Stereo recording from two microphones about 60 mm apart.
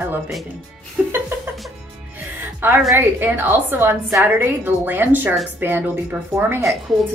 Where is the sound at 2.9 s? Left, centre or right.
Right.